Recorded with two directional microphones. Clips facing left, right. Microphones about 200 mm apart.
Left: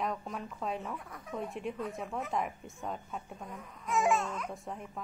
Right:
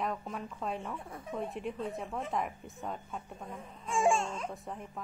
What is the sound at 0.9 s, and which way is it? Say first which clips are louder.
Speech: right 2 dB; 25° right (ahead or behind).